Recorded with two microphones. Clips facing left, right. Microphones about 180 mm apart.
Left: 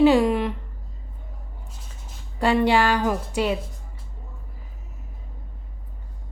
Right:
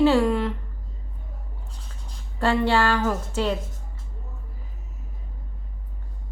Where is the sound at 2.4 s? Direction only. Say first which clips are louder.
Left 2 dB; 15° left (ahead or behind).